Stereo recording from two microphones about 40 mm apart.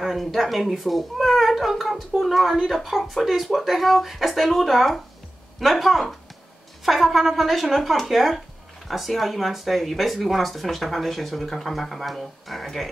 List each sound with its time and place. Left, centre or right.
0.0 s a child's voice: centre